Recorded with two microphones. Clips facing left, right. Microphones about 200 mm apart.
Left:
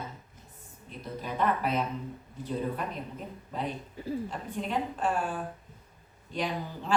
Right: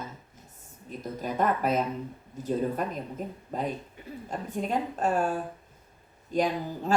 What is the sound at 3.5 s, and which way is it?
Speech, 45° right (ahead or behind).